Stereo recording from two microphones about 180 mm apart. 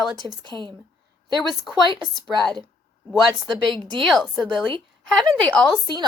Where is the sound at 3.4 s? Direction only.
25° right (ahead or behind).